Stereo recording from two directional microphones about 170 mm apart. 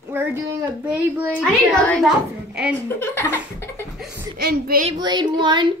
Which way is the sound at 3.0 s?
15° left (ahead or behind).